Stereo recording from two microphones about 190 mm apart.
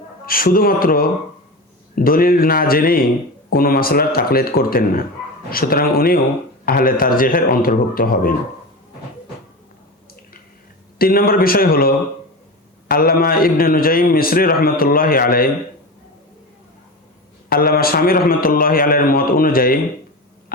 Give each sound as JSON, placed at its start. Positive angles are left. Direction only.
{"t": 0.3, "sound": "a man's voice", "side_deg": 50}
{"t": 10.9, "sound": "a man's voice", "side_deg": 50}
{"t": 17.5, "sound": "a man's voice", "side_deg": 50}